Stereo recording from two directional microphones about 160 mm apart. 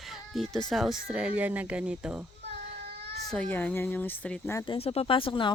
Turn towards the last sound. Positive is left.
turn(degrees=35)  # may be behind; listen again after turning